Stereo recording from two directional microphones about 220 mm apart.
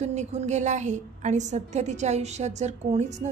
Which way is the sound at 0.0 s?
30° right (ahead or behind).